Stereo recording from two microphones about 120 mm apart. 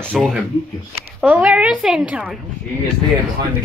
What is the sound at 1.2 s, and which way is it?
A woman's voice, 10° right (ahead or behind).